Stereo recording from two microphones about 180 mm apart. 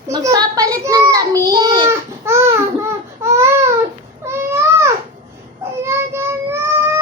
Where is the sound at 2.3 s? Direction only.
15° right (ahead or behind).